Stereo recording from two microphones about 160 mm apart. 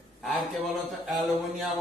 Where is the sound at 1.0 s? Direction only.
Centre (ahead or behind).